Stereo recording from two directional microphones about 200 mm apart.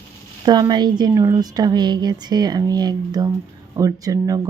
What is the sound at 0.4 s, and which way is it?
A woman's voice, 20° right (ahead or behind).